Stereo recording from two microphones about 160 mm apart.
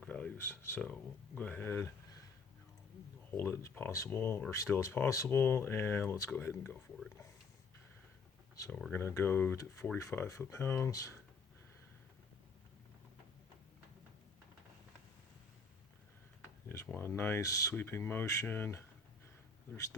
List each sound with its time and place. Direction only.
0.0 s a sound: 10° left (ahead or behind)
1.4 s speech: 10° left (ahead or behind)
3.3 s speech: 15° left (ahead or behind)
8.5 s speech: 20° left (ahead or behind)
16.6 s speech: 15° left (ahead or behind)